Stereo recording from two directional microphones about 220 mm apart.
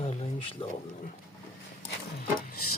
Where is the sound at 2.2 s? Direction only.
45° left (ahead or behind).